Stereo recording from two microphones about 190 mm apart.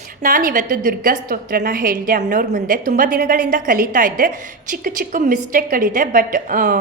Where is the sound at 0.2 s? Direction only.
45° right (ahead or behind).